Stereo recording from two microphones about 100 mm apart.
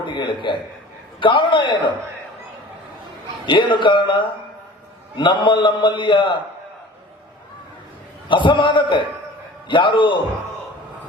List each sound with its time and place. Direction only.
0.0 s a sound: 55° left (ahead or behind)
1.2 s a man's voice: 55° left (ahead or behind)
3.4 s a man's voice: 55° left (ahead or behind)
8.3 s a man's voice: 55° left (ahead or behind)